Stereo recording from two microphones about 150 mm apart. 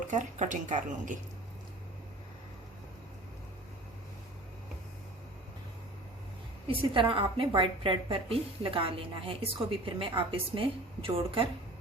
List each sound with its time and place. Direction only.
0.1 s speech: 55° right (ahead or behind)
6.7 s a woman's voice: 35° right (ahead or behind)